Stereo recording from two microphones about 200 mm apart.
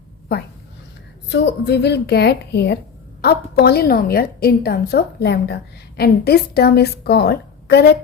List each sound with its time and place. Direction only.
1.3 s a woman's voice: 60° left (ahead or behind)